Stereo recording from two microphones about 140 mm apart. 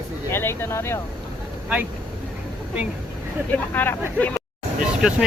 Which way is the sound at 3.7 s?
15° left (ahead or behind).